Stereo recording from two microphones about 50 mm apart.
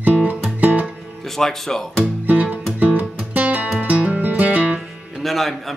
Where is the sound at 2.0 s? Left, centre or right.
Right.